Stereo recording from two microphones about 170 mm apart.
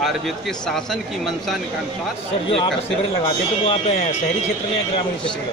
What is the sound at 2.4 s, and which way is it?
Speech, 30° left (ahead or behind).